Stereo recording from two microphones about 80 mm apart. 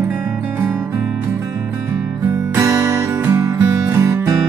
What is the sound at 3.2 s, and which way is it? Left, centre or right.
Music, right.